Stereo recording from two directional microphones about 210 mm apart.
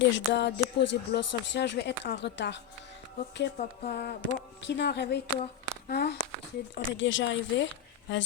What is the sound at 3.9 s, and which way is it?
Speech, 50° left (ahead or behind).